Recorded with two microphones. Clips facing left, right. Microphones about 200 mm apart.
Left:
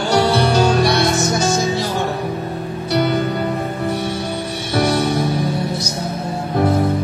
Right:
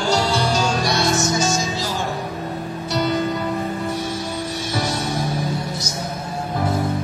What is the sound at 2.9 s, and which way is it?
Music, 60° left (ahead or behind).